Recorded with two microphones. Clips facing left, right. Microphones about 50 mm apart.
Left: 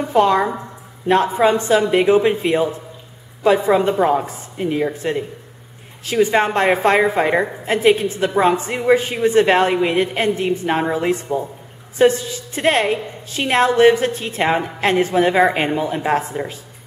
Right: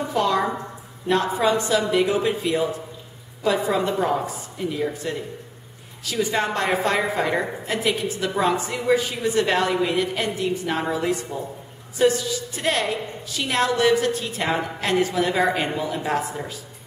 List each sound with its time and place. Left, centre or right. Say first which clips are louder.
0.1 s a woman's voice: left 7 dB; left